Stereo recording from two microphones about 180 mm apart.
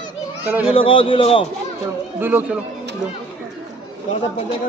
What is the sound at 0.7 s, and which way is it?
Speech, 30° left (ahead or behind).